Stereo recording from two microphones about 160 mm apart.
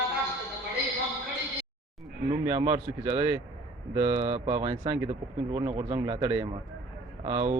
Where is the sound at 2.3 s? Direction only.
30° right (ahead or behind).